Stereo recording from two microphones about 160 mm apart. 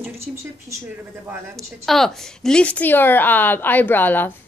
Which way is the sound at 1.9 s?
Centre (ahead or behind).